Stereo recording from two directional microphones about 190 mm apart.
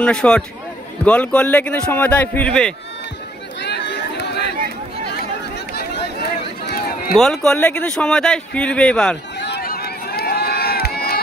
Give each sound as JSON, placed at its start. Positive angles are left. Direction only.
{"t": 0.0, "sound": "speech", "side_deg": 5}
{"t": 3.6, "sound": "chatter", "side_deg": 65}
{"t": 4.6, "sound": "a sound", "side_deg": 60}
{"t": 6.6, "sound": "run", "side_deg": 55}
{"t": 7.2, "sound": "speech", "side_deg": 5}
{"t": 9.4, "sound": "run", "side_deg": 55}